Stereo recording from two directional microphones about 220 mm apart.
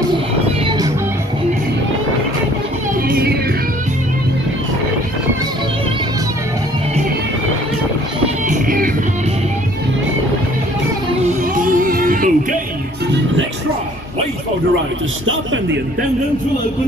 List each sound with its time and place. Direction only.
0.7 s music: 15° right (ahead or behind)
3.1 s music: 45° right (ahead or behind)
8.5 s music: 40° right (ahead or behind)
11.2 s music: 35° right (ahead or behind)
15.2 s a sound: 60° right (ahead or behind)